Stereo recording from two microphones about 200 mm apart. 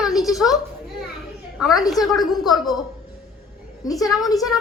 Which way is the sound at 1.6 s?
Centre (ahead or behind).